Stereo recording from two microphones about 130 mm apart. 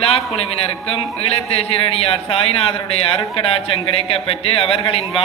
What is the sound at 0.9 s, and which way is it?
Speech, 50° left (ahead or behind).